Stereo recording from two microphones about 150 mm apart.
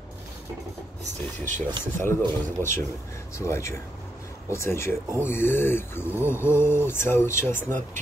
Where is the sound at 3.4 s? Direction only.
20° left (ahead or behind).